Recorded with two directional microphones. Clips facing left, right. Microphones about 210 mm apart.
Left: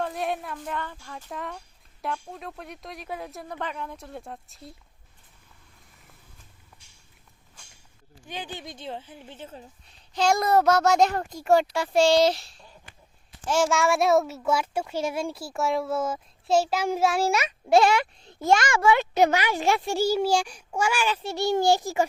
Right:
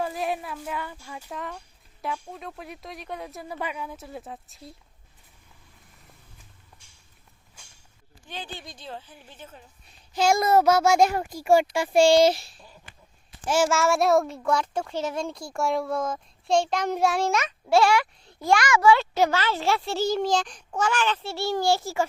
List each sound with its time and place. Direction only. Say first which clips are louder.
0.0 s speech: even; centre (ahead or behind)
8.3 s a woman's voice: left 2 dB; 15° left (ahead or behind)
10.2 s a child's voice: right 1 dB; 5° right (ahead or behind); by 22.0 s 15° left (ahead or behind)